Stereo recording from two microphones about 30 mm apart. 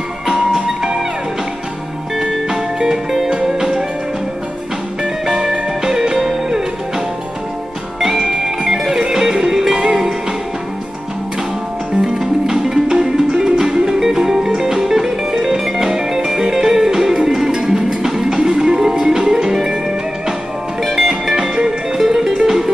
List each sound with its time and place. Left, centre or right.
0.3 s music: centre
2.1 s music: centre
5.0 s music: centre
8.0 s music: centre
12.0 s music: centre
17.1 s music: right
20.8 s music: centre
21.1 s music: centre